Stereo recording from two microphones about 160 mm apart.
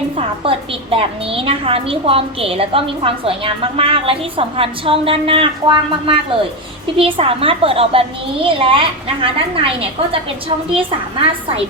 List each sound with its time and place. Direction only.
0.2 s a woman's voice: 35° right (ahead or behind)